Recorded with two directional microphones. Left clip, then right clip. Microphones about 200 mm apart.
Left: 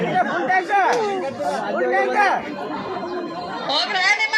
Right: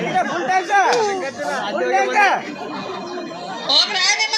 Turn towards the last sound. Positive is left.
turn(degrees=-10)  # may be behind; listen again after turning